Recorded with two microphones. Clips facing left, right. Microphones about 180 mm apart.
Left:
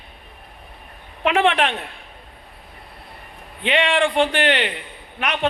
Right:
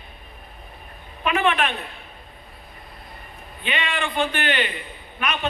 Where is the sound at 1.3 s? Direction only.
90° left.